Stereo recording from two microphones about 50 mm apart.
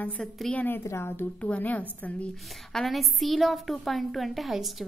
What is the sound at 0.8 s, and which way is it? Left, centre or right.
Speech, left.